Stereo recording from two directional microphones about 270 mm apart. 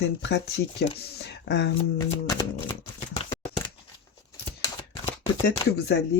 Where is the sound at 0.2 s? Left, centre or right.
Left.